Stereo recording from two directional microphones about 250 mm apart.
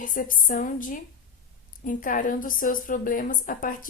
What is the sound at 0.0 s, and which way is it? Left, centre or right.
A woman's voice, left.